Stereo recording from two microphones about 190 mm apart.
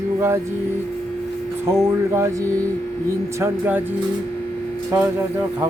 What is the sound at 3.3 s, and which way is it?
Speech, 10° right (ahead or behind).